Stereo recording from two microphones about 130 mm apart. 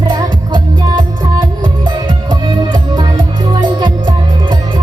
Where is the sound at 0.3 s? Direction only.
35° right (ahead or behind).